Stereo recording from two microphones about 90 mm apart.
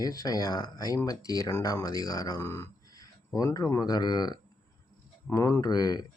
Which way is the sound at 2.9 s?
45° left (ahead or behind).